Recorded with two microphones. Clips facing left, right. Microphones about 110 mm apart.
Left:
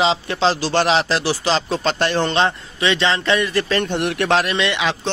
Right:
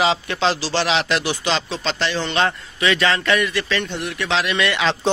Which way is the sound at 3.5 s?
45° left (ahead or behind).